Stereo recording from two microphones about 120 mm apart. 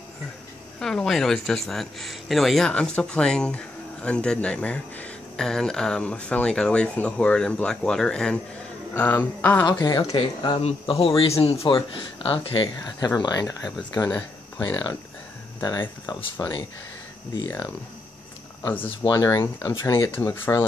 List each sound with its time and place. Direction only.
0.7 s speech: 5° left (ahead or behind)
9.7 s speech: 35° left (ahead or behind)
15.6 s speech: 35° left (ahead or behind)
18.6 s speech: 15° left (ahead or behind)
19.0 s speech: 30° left (ahead or behind)
20.1 s speech: 20° left (ahead or behind)